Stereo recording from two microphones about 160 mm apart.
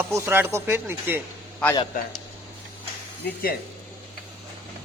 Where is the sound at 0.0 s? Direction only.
15° right (ahead or behind).